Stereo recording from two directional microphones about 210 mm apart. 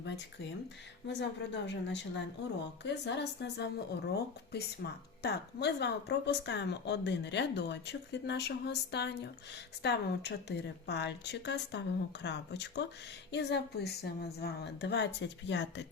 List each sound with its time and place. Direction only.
1.0 s a woman's voice: 55° left (ahead or behind)